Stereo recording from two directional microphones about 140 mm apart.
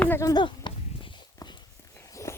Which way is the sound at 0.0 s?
20° left (ahead or behind).